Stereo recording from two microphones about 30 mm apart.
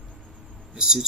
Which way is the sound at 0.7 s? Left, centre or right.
Right.